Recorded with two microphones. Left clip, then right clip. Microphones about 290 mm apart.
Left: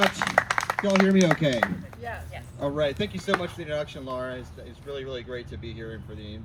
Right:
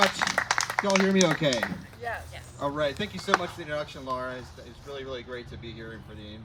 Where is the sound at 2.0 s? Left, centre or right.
Right.